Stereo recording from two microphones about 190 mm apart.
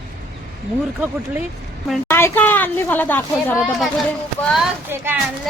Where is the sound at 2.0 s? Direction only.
10° left (ahead or behind).